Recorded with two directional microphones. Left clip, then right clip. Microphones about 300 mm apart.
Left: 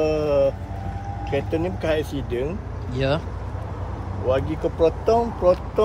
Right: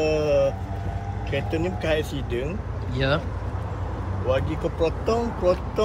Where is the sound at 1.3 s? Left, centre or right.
Left.